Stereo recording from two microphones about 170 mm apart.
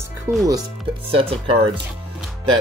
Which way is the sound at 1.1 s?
30° right (ahead or behind).